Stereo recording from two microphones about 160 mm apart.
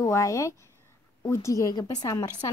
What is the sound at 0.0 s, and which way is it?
Speech, 20° left (ahead or behind).